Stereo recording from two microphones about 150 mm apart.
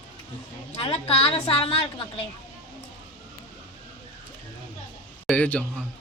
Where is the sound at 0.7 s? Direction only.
40° left (ahead or behind).